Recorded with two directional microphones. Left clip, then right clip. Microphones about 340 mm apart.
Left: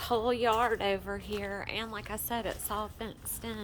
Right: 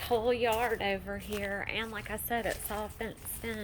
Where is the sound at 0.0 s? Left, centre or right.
Centre.